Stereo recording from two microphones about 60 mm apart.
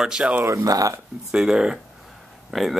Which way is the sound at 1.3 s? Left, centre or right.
Centre.